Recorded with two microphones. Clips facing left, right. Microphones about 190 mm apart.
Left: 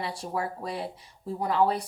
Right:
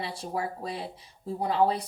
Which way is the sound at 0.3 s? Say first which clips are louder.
Even; 25° right (ahead or behind).